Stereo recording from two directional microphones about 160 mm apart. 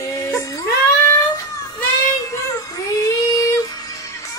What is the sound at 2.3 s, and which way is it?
Music, 20° left (ahead or behind).